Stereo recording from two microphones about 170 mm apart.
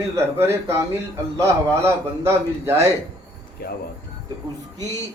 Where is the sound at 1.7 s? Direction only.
15° right (ahead or behind).